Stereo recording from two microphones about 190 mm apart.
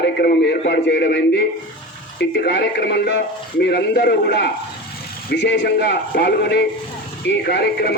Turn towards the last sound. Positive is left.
turn(degrees=55)  # may be behind; listen again after turning